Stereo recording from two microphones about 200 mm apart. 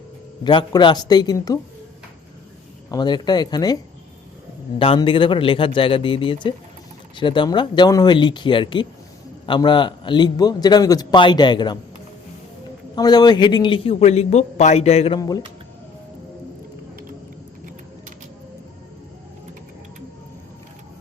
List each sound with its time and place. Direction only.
0.4 s a man's voice: 20° left (ahead or behind)
2.9 s a man's voice: 20° left (ahead or behind)
4.8 s a man's voice: 25° left (ahead or behind)
13.0 s a man's voice: 20° left (ahead or behind)